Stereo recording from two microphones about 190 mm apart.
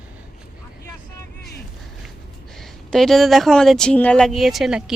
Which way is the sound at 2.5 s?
Centre (ahead or behind).